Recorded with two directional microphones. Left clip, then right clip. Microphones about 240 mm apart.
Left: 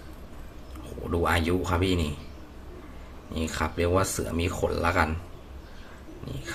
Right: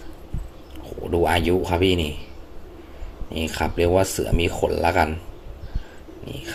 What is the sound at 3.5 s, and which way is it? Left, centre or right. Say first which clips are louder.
Speech: right 6 dB; centre.